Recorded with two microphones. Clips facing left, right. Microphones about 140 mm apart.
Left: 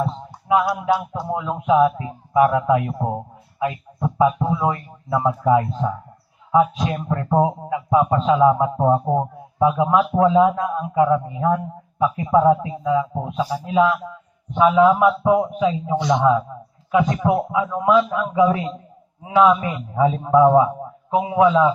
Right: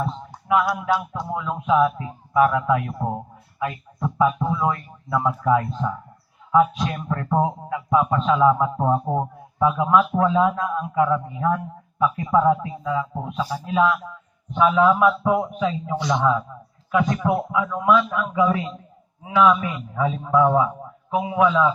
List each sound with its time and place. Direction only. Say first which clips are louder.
0.0 s a man's voice: left 3 dB; 30° left (ahead or behind)